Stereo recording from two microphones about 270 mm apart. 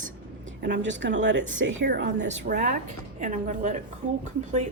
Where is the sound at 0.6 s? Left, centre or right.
Right.